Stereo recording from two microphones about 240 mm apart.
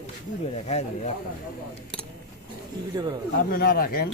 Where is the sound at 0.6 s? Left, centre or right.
Left.